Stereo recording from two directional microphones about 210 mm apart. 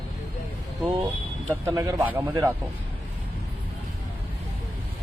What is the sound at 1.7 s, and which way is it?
Speech, 15° right (ahead or behind).